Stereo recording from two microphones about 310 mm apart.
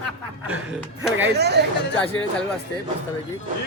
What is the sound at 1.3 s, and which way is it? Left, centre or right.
Speech, right.